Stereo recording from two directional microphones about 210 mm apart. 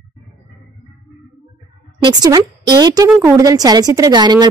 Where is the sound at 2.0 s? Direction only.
20° right (ahead or behind).